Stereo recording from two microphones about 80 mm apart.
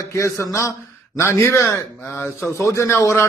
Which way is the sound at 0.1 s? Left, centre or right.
Left.